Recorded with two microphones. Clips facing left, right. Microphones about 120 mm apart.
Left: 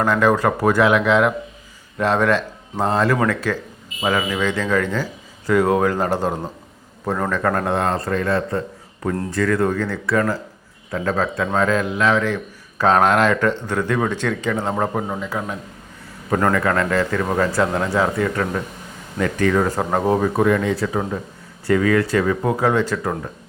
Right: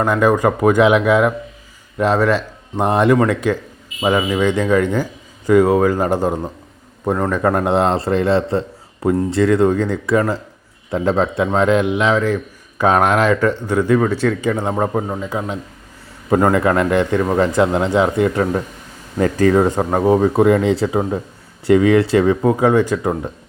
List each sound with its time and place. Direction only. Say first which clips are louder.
0.0 s speech: right 2 dB; 10° right (ahead or behind)
2.7 s a man's voice: right 5 dB; 20° right (ahead or behind)
9.0 s speech: right 7 dB; 10° right (ahead or behind)
9.3 s a man's voice: right 4 dB; 25° right (ahead or behind); by 15.2 s 5° right (ahead or behind)
15.2 s a man's voice: right 3 dB; 15° right (ahead or behind)
19.2 s a man's voice: right 5 dB; 35° right (ahead or behind)
19.8 s speech: right 4 dB; 5° right (ahead or behind)
20.2 s a man's voice: right 4 dB; 25° right (ahead or behind)
22.5 s speech: right 4 dB; 15° right (ahead or behind)